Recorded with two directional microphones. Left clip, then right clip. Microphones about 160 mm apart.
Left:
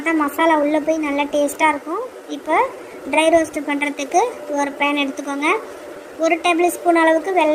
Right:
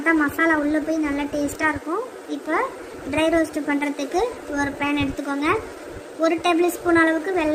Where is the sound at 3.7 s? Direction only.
50° right (ahead or behind).